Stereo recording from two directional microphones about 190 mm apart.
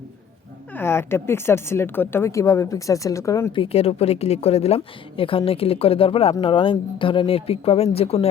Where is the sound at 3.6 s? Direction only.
30° left (ahead or behind).